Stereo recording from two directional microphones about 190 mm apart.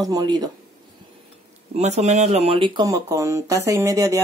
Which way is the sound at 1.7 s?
35° right (ahead or behind).